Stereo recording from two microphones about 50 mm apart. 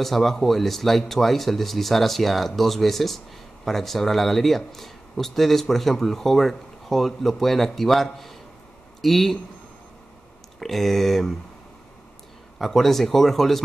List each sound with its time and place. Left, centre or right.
0.0 s speech: centre
10.6 s speech: centre
12.5 s speech: centre